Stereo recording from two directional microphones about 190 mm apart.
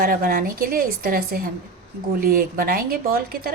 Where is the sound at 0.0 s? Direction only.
50° right (ahead or behind).